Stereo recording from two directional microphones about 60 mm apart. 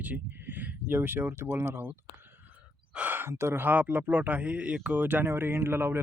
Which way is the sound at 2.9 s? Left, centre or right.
Right.